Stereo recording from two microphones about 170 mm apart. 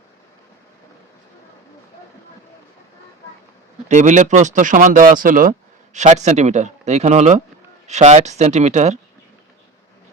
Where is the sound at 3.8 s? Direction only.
45° right (ahead or behind).